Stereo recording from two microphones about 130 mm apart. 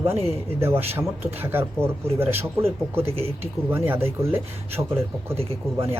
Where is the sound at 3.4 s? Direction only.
15° right (ahead or behind).